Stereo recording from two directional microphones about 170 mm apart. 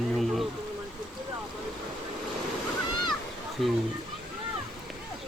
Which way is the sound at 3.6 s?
Centre (ahead or behind).